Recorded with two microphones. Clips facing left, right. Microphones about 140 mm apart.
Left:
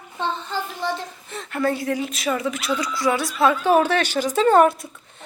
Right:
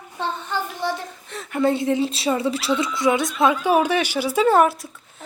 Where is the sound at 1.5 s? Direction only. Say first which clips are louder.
Right 3 dB; 20° right (ahead or behind).